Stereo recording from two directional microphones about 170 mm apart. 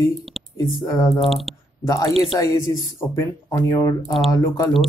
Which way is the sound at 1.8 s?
20° left (ahead or behind).